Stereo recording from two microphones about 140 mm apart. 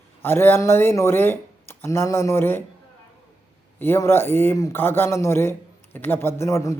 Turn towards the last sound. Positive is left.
turn(degrees=20)  # may be behind; listen again after turning